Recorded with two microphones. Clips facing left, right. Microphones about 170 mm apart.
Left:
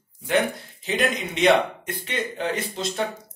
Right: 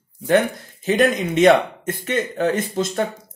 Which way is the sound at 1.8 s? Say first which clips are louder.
Right 6 dB; 45° right (ahead or behind).